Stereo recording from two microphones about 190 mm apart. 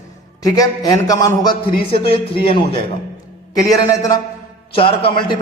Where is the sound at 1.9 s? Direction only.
30° left (ahead or behind).